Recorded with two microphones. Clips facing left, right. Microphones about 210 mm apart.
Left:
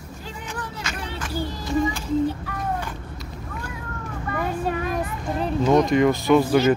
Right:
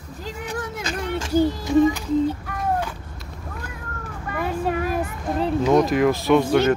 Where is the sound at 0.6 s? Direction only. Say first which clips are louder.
Right 4 dB; 45° right (ahead or behind).